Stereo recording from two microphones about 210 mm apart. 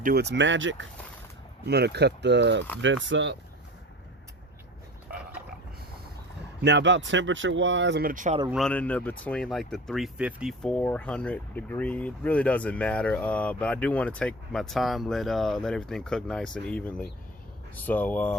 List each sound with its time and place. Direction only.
0.0 s speech: 50° right (ahead or behind)
1.6 s speech: 50° right (ahead or behind)
6.6 s speech: 55° right (ahead or behind); by 8.4 s 40° right (ahead or behind)
8.4 s speech: centre (ahead or behind)